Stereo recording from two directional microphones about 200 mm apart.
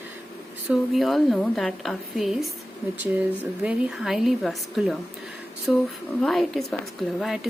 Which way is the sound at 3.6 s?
Centre (ahead or behind).